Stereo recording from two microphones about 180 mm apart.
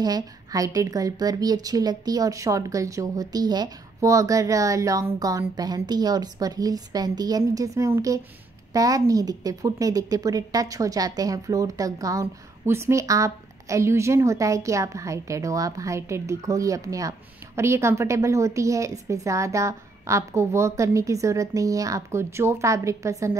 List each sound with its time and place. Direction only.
0.0 s a woman's voice: 20° right (ahead or behind)